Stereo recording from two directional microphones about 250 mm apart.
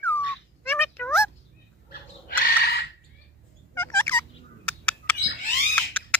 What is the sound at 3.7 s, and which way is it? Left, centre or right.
Fowl, centre.